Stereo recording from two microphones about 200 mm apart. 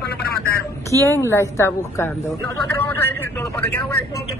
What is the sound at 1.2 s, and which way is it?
Speech, 15° left (ahead or behind).